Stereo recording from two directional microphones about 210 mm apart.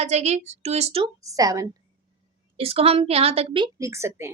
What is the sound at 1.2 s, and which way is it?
Speech, 15° right (ahead or behind).